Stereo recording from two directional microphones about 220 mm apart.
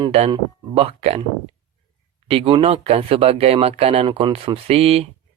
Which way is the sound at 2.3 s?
25° right (ahead or behind).